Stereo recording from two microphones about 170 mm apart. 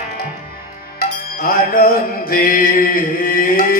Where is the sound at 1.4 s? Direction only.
60° left (ahead or behind).